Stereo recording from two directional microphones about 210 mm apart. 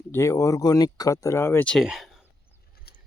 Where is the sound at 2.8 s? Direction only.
45° left (ahead or behind).